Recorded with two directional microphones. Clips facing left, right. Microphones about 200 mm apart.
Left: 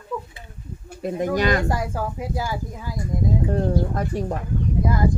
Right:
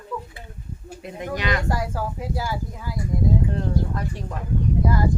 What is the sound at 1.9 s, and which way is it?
Speech, 15° left (ahead or behind).